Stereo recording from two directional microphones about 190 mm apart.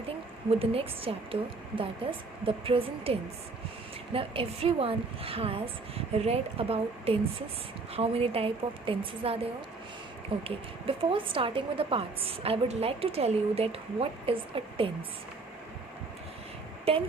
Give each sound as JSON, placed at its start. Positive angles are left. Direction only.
{"t": 0.6, "sound": "a woman's voice", "side_deg": -30}
{"t": 16.9, "sound": "a woman's voice", "side_deg": -30}